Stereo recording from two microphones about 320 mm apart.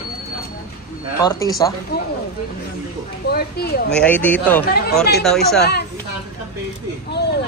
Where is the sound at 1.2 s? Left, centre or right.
Centre.